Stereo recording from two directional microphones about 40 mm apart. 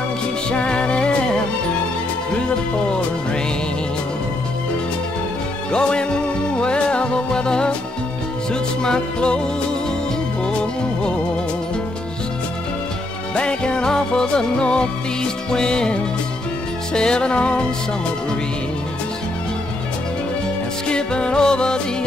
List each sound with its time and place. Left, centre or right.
0.5 s music: left
5.7 s music: left
8.8 s music: left
10.4 s music: left
13.3 s music: left
20.9 s music: left